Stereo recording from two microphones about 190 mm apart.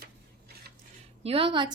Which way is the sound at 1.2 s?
30° right (ahead or behind).